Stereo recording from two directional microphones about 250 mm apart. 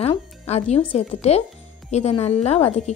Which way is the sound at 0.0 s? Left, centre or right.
Left.